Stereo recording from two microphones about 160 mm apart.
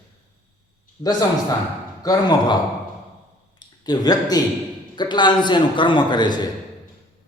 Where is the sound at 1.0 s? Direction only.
25° left (ahead or behind).